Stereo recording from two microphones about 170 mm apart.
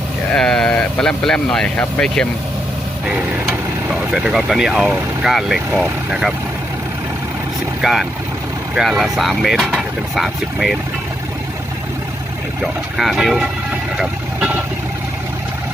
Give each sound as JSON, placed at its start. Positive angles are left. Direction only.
{"t": 0.3, "sound": "speech", "side_deg": 5}
{"t": 3.4, "sound": "speech", "side_deg": -5}
{"t": 7.8, "sound": "speech", "side_deg": 0}
{"t": 12.6, "sound": "speech", "side_deg": 0}